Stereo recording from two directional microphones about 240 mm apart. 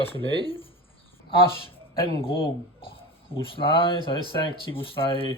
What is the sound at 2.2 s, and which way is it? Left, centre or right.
Speech, left.